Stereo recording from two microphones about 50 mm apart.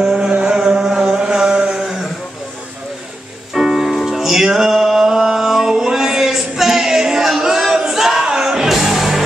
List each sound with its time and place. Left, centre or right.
0.0 s vehicle: centre
0.3 s chant: centre
3.5 s music: centre